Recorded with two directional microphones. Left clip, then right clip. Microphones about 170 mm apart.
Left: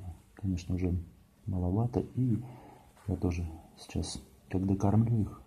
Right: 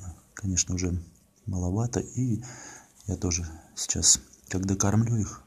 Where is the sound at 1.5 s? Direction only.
15° right (ahead or behind).